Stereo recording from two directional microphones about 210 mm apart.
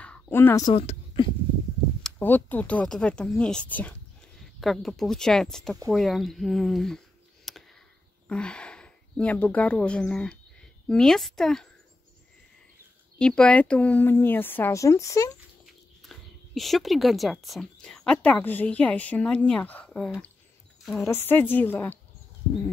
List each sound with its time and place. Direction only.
0.0 s a sound: 5° left (ahead or behind)
0.7 s speech: 25° left (ahead or behind)
2.0 s speech: 10° left (ahead or behind)
7.5 s a sound: centre (ahead or behind)
8.3 s speech: 5° left (ahead or behind)
13.2 s speech: 5° left (ahead or behind)
15.6 s speech: centre (ahead or behind)